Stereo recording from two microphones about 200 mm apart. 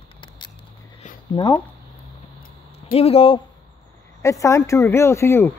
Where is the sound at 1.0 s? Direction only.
40° left (ahead or behind).